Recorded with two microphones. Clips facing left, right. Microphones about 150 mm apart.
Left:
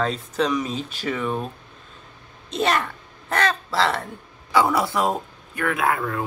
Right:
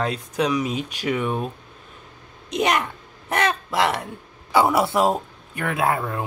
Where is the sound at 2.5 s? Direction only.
15° right (ahead or behind).